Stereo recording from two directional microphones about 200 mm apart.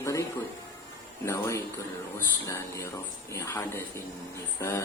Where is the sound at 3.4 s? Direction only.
10° left (ahead or behind).